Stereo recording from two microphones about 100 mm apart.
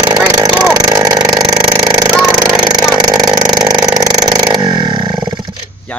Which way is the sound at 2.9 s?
40° right (ahead or behind).